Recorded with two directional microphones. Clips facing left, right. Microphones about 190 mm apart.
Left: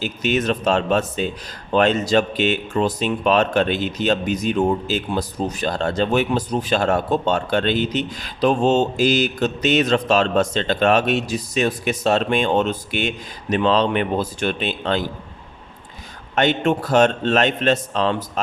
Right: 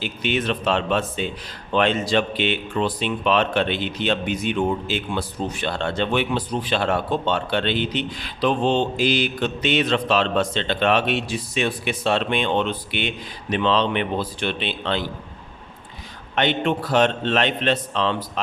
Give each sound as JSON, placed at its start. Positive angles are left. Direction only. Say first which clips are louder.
{"t": 0.0, "sound": "speech", "louder": "left 3 dB", "side_deg": 45}
{"t": 16.3, "sound": "speech", "louder": "left 3 dB", "side_deg": 45}